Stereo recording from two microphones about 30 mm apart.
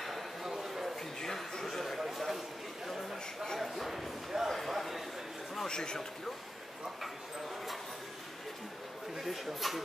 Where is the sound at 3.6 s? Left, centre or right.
Centre.